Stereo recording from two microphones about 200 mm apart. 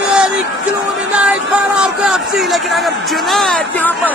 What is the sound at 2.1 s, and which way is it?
Speech, centre (ahead or behind).